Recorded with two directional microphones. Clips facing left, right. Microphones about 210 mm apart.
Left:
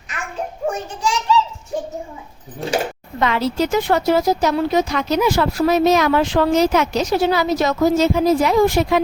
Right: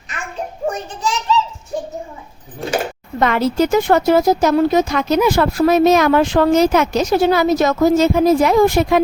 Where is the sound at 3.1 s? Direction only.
50° right (ahead or behind).